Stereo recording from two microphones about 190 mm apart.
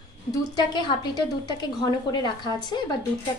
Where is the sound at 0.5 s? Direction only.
20° left (ahead or behind).